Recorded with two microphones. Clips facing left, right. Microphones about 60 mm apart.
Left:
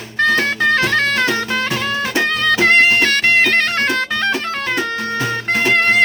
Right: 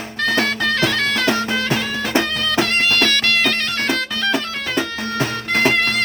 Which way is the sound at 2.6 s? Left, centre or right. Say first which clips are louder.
Left 8 dB; left.